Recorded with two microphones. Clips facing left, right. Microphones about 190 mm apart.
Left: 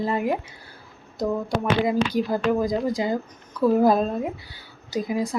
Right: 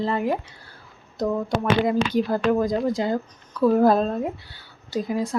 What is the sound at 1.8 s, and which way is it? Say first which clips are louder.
Speech: right 1 dB; 10° left (ahead or behind).